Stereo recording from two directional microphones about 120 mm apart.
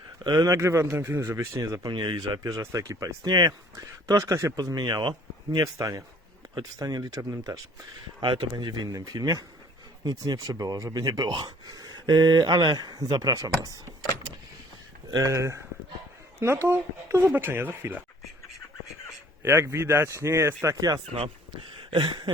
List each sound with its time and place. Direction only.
0.3 s a man's voice: 30° right (ahead or behind)
5.6 s a man's voice: 30° right (ahead or behind)
8.2 s speech: 40° right (ahead or behind)
15.1 s a man's voice: 25° right (ahead or behind)
16.6 s speech: 20° right (ahead or behind)
19.4 s a man's voice: 25° right (ahead or behind)
21.8 s a sound: 40° right (ahead or behind)